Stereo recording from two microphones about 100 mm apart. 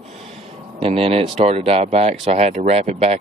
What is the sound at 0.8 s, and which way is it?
Speech, 80° right.